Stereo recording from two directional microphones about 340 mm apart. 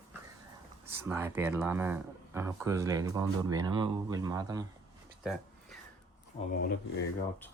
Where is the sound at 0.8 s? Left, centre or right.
Centre.